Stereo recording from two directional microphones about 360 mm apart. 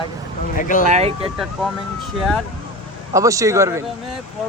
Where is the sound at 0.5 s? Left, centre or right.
Left.